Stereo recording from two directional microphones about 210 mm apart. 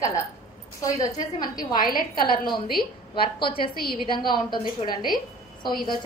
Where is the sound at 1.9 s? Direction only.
45° left (ahead or behind).